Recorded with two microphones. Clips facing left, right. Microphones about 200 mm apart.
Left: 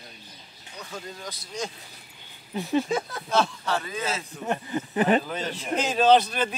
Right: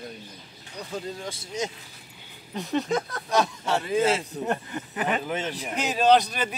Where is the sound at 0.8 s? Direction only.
30° right (ahead or behind).